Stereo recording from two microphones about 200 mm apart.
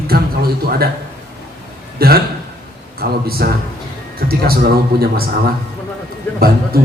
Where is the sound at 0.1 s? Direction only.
50° right (ahead or behind).